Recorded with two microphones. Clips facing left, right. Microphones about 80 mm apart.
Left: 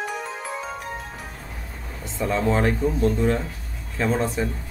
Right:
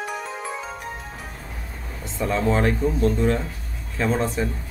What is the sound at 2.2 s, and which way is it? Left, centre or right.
Speech, centre.